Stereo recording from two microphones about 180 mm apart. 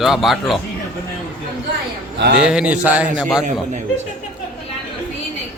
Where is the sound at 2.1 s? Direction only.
70° right (ahead or behind).